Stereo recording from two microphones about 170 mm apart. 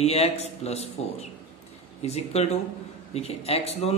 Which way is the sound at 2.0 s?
40° left (ahead or behind).